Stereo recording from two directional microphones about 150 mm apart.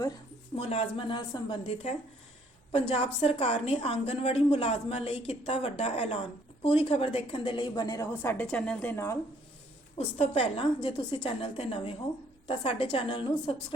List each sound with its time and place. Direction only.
0.5 s a woman's voice: 40° left (ahead or behind)
2.7 s a woman's voice: 35° left (ahead or behind); by 9.1 s 15° left (ahead or behind)
10.0 s a woman's voice: 40° left (ahead or behind)